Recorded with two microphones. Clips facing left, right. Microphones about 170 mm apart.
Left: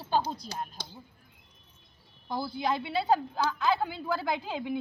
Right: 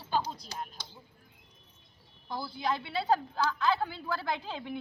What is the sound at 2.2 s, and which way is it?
Speech, 20° left (ahead or behind).